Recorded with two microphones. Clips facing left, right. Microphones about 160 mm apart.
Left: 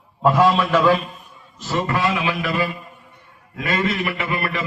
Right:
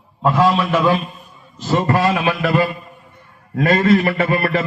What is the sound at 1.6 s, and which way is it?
A man's voice, 40° right (ahead or behind).